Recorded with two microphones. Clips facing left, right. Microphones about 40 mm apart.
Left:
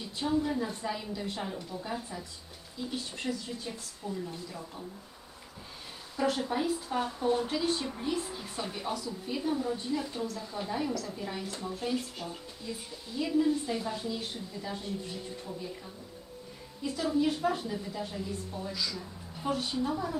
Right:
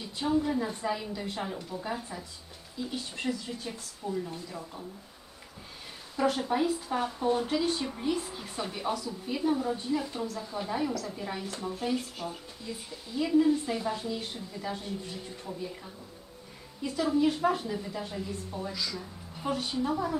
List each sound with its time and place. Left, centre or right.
0.2 s a woman's voice: centre
6.1 s a woman's voice: centre
13.3 s a woman's voice: centre
16.8 s a woman's voice: centre
18.7 s a woman's voice: centre